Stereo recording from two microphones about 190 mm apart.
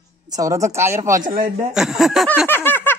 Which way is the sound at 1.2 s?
45° right (ahead or behind).